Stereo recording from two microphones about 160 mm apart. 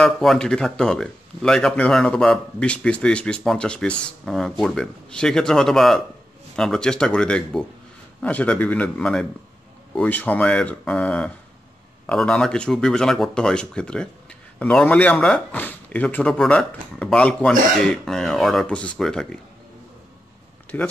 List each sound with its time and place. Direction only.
0.0 s speech: 5° left (ahead or behind)
20.7 s speech: 10° left (ahead or behind)